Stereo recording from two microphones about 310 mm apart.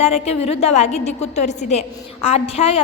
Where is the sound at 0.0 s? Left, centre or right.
Centre.